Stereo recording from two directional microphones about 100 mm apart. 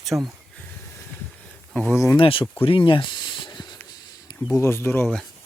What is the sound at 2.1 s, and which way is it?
Speech, 60° left (ahead or behind).